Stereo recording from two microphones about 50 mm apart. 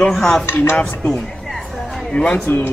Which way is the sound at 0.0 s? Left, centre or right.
Centre.